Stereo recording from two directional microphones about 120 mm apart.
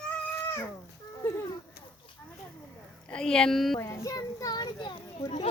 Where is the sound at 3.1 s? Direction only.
5° left (ahead or behind).